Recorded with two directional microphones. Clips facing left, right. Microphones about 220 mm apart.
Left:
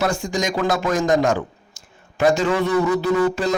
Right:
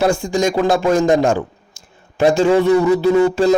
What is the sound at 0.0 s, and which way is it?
A man's voice, 30° right (ahead or behind).